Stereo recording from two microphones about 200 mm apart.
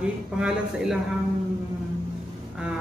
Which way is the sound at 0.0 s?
5° right (ahead or behind).